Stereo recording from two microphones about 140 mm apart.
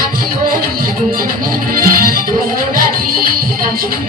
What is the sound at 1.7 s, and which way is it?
Music, 90° right.